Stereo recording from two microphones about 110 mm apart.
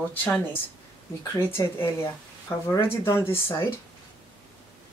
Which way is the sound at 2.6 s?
25° left (ahead or behind).